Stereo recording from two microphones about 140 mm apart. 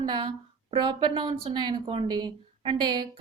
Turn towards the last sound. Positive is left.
turn(degrees=-35)  # may be behind; listen again after turning